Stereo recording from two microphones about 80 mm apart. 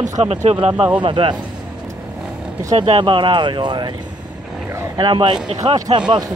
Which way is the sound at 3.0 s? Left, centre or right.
Right.